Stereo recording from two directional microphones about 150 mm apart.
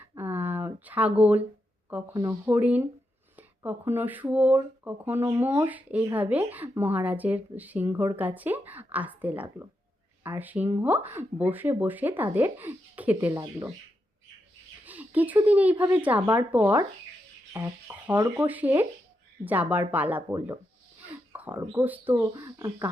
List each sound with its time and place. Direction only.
0.0 s a sound: 15° right (ahead or behind)
2.5 s speech: 10° right (ahead or behind)
13.3 s speech: 20° right (ahead or behind)
14.8 s speech: 10° right (ahead or behind)
21.3 s a sound: 10° right (ahead or behind)
21.6 s speech: 15° right (ahead or behind)